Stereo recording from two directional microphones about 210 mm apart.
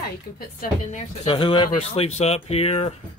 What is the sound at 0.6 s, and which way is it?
Speech, 30° left (ahead or behind).